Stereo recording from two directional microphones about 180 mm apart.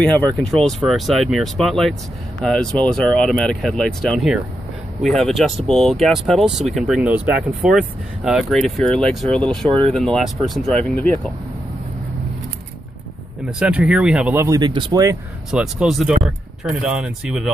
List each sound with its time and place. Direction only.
0.0 s speech: 5° left (ahead or behind)
13.4 s speech: 5° right (ahead or behind)
14.6 s speech: 25° right (ahead or behind)
15.5 s speech: 5° right (ahead or behind)